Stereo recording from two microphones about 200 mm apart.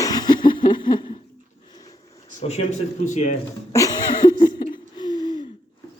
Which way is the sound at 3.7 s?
15° left (ahead or behind).